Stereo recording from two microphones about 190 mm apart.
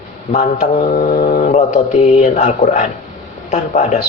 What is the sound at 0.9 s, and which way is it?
Speech, 50° left (ahead or behind).